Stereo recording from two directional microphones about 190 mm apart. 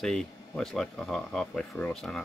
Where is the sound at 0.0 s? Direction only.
Centre (ahead or behind).